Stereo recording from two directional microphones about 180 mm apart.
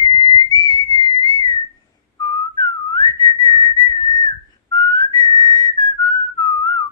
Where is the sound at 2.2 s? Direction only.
25° left (ahead or behind).